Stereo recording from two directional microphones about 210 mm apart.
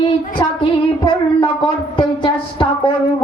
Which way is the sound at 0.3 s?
25° left (ahead or behind).